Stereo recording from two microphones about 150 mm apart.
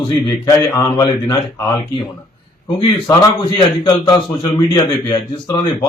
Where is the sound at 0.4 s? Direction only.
20° left (ahead or behind).